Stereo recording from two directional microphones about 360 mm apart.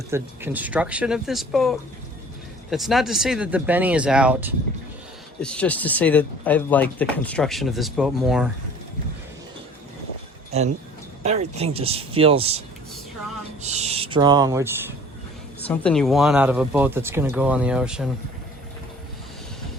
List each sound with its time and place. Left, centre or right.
0.1 s speech: centre
11.2 s speech: centre
15.6 s speech: centre